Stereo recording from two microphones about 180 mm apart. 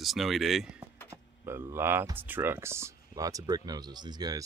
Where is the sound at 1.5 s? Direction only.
15° right (ahead or behind).